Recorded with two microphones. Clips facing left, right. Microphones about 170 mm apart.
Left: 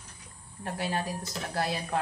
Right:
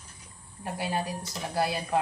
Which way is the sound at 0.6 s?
10° right (ahead or behind).